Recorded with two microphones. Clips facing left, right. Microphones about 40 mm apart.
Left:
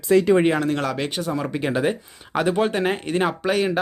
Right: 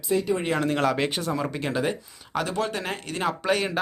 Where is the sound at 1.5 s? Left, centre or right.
Centre.